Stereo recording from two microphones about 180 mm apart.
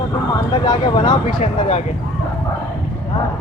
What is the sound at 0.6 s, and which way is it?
Speech, 25° left (ahead or behind).